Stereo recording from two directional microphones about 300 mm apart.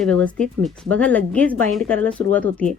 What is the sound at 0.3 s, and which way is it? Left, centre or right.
Speech, centre.